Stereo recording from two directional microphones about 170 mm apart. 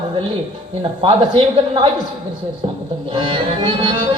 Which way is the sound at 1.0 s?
30° right (ahead or behind).